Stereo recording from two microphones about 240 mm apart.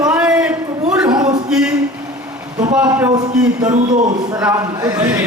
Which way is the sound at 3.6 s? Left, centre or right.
Right.